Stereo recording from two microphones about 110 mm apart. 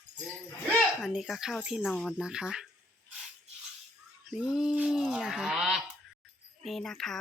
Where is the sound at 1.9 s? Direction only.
10° left (ahead or behind).